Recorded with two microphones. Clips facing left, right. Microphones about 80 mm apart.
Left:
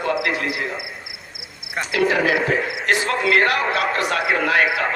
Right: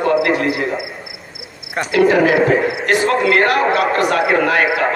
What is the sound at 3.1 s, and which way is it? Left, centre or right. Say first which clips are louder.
A man's voice: right 4 dB; right.